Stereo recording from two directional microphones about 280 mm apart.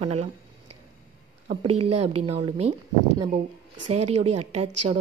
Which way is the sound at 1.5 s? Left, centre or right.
Right.